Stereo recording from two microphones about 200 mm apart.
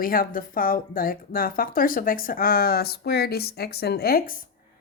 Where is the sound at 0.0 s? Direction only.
45° left (ahead or behind).